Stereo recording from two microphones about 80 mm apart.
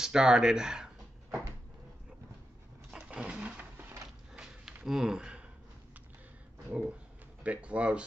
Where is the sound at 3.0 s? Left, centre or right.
Centre.